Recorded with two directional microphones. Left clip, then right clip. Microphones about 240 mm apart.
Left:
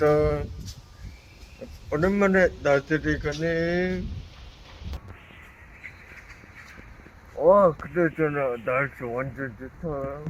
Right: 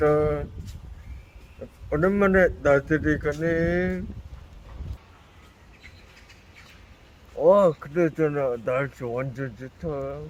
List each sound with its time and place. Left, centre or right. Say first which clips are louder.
0.0 s a man's voice: even; centre
1.9 s a man's voice: right 1 dB; centre
7.6 s speech: even; right